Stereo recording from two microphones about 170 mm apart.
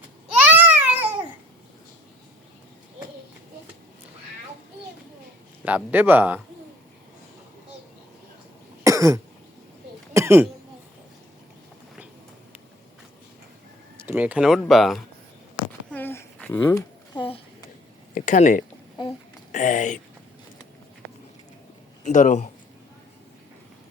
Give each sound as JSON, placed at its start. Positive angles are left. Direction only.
{"t": 0.5, "sound": "babbling", "side_deg": -10}
{"t": 5.6, "sound": "speech", "side_deg": -10}
{"t": 8.8, "sound": "cough", "side_deg": -20}
{"t": 10.2, "sound": "throat clearing", "side_deg": -15}
{"t": 14.0, "sound": "speech", "side_deg": -10}
{"t": 15.9, "sound": "a sound", "side_deg": 10}
{"t": 17.2, "sound": "a sound", "side_deg": 35}
{"t": 18.1, "sound": "speech", "side_deg": 50}
{"t": 22.0, "sound": "speech", "side_deg": 45}